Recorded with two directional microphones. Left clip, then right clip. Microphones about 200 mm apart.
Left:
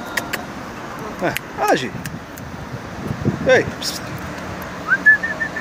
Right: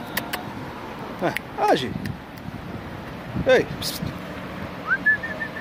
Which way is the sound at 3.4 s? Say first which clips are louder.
Left 3 dB; 20° right (ahead or behind).